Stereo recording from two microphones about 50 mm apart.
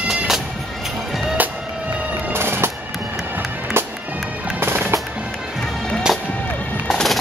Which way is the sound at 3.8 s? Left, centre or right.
Right.